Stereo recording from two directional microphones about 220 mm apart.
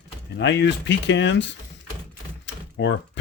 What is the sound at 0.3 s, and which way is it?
Speech, 55° left (ahead or behind).